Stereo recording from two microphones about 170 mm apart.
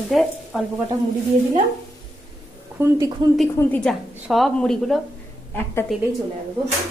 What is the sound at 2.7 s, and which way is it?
Speech, 20° right (ahead or behind).